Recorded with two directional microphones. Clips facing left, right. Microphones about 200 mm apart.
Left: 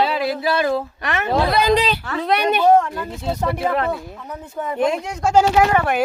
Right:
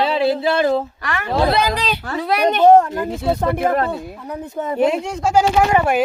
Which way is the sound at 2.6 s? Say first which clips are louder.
Right 4 dB; 30° right (ahead or behind).